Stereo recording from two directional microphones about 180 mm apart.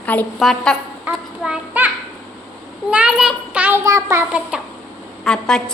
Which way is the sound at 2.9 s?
5° right (ahead or behind).